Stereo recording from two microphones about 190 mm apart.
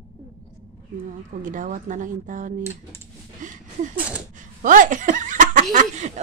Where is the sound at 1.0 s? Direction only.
45° right (ahead or behind).